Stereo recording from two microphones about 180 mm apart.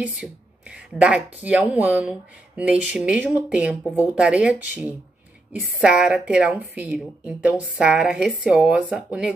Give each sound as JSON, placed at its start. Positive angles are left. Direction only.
{"t": 0.0, "sound": "a woman's voice", "side_deg": -5}